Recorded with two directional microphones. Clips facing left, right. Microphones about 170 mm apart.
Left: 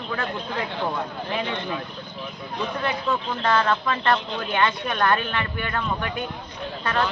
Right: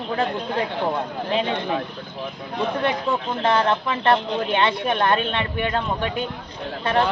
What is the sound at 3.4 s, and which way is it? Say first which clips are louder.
A man's voice: right 2 dB; 20° right (ahead or behind).